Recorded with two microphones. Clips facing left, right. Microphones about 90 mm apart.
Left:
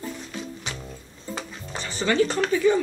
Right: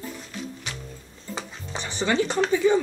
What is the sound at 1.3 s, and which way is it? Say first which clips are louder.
Stir: even; 20° right (ahead or behind).